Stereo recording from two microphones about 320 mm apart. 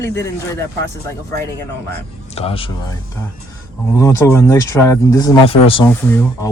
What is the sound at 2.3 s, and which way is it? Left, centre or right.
Speech, centre.